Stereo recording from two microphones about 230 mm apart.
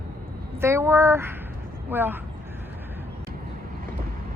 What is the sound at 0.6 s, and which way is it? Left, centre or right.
Speech, centre.